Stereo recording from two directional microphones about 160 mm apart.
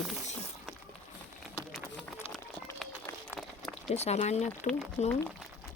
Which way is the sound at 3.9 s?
45° left (ahead or behind).